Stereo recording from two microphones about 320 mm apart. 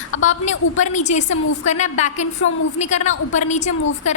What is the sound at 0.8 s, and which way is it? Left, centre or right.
A woman's voice, left.